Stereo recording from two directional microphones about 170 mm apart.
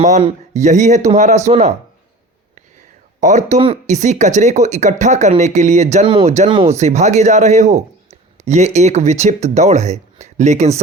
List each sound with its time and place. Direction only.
0.2 s speech: 40° right (ahead or behind)
3.2 s speech: 45° right (ahead or behind)
6.1 s speech: 30° right (ahead or behind)
6.7 s speech: 40° right (ahead or behind)